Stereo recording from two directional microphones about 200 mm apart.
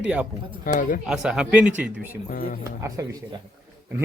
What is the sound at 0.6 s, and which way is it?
Speech, 40° left (ahead or behind).